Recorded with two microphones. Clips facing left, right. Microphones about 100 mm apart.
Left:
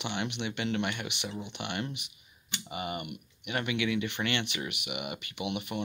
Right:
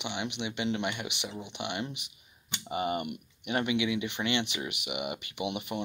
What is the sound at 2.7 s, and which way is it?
Speech, 30° right (ahead or behind).